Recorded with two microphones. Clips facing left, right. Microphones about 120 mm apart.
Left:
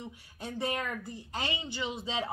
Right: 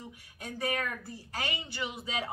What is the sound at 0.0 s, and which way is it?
A woman's voice, 25° left (ahead or behind).